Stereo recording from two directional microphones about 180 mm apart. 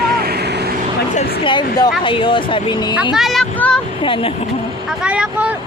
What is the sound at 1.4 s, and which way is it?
Speech, 25° left (ahead or behind).